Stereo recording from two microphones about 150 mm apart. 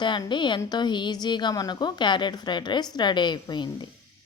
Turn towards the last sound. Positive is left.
turn(degrees=30)  # may be behind; listen again after turning